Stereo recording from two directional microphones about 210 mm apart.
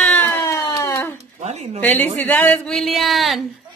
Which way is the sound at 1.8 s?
10° left (ahead or behind).